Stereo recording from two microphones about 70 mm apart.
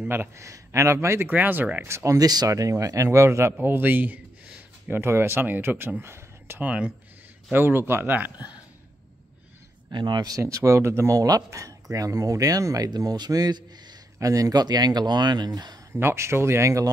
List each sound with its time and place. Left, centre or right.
0.1 s a man's voice: right
1.3 s speech: right
1.9 s speech: right
2.1 s speech: right
2.5 s a man's voice: right
3.1 s a man's voice: right
3.5 s a sound: right
5.0 s speech: right
6.6 s speech: centre
7.5 s speech: right
10.0 s speech: right
10.3 s speech: right
14.1 s speech: right
15.9 s speech: right